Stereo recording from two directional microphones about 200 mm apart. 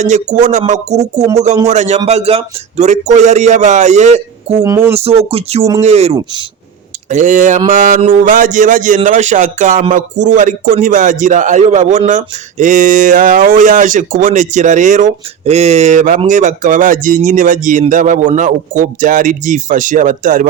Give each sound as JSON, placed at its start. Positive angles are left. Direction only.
{"t": 0.0, "sound": "speech", "side_deg": -35}
{"t": 4.6, "sound": "speech", "side_deg": -15}
{"t": 4.9, "sound": "speech", "side_deg": -30}